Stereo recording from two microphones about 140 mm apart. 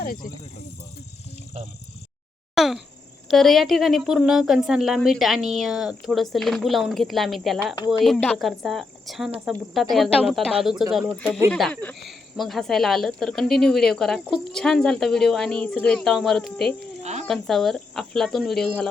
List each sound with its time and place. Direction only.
0.0 s snake: 90° left
2.6 s speech: centre (ahead or behind)
17.0 s a sound: 50° right (ahead or behind)
17.2 s speech: centre (ahead or behind)